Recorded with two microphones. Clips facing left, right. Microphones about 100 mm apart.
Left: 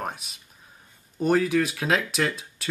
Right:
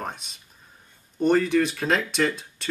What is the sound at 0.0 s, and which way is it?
Speech, 5° left (ahead or behind).